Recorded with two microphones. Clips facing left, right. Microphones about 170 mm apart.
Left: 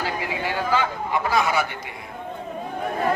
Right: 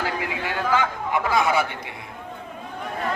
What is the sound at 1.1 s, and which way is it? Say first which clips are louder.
Speech: right 1 dB; 20° right (ahead or behind).